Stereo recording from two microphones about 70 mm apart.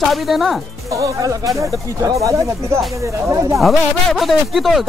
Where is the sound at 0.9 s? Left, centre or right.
Right.